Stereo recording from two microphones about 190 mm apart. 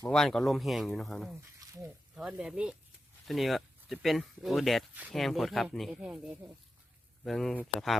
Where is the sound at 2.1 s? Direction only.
5° right (ahead or behind).